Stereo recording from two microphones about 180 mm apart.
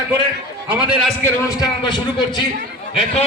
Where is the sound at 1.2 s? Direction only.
20° left (ahead or behind).